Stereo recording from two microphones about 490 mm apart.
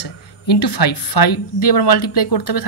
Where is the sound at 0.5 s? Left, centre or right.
Left.